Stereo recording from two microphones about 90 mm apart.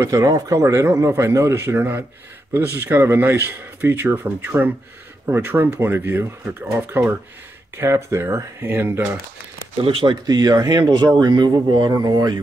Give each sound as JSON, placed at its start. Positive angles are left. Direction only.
{"t": 0.0, "sound": "speech", "side_deg": -40}
{"t": 9.8, "sound": "speech", "side_deg": -70}
{"t": 10.2, "sound": "speech", "side_deg": -45}